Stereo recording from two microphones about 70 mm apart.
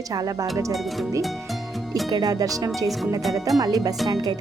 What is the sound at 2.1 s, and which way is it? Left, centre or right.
Speech, right.